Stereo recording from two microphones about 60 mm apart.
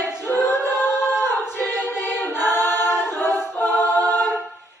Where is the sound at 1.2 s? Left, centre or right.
Left.